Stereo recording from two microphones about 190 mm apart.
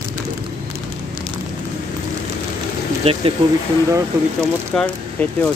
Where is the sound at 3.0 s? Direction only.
35° right (ahead or behind).